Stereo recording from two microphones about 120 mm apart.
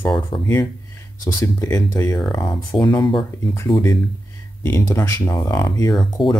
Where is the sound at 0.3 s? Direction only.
40° left (ahead or behind).